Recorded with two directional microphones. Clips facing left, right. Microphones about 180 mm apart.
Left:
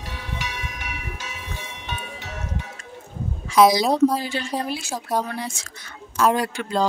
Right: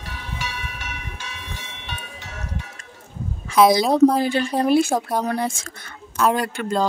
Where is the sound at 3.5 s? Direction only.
55° right (ahead or behind).